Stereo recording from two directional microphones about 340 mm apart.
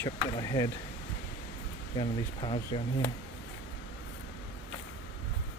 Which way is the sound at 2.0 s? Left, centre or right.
Centre.